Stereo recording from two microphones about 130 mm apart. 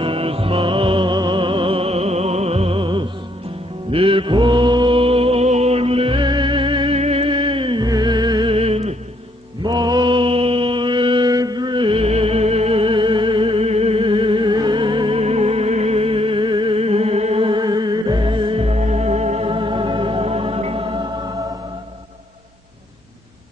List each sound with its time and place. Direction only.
0.0 s music: 45° right (ahead or behind)
3.9 s mantra: 45° right (ahead or behind)
7.0 s music: 50° right (ahead or behind); by 8.5 s 35° right (ahead or behind)
8.5 s music: 50° right (ahead or behind)
9.6 s mantra: 35° right (ahead or behind)
21.0 s music: 35° right (ahead or behind)